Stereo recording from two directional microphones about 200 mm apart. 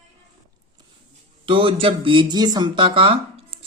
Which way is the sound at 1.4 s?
25° right (ahead or behind).